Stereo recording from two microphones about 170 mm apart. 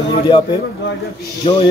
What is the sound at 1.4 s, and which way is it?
Speech, 30° left (ahead or behind).